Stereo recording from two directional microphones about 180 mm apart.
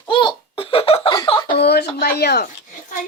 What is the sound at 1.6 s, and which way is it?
Speech, 65° left (ahead or behind).